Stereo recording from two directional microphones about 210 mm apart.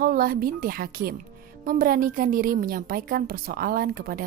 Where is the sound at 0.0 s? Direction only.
45° right (ahead or behind).